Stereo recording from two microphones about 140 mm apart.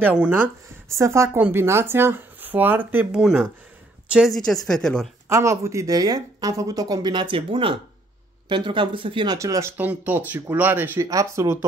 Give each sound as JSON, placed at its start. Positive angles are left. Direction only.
{"t": 0.0, "sound": "speech", "side_deg": -10}
{"t": 5.3, "sound": "speech", "side_deg": -20}
{"t": 9.4, "sound": "speech", "side_deg": -20}